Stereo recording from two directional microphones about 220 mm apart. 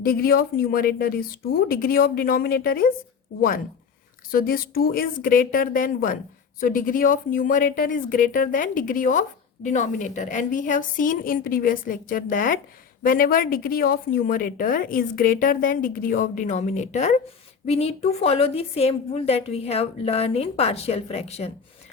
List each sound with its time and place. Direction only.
0.0 s speech: 40° left (ahead or behind)
4.3 s a woman's voice: 40° left (ahead or behind)